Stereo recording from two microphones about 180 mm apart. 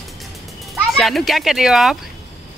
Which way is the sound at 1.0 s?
Centre (ahead or behind).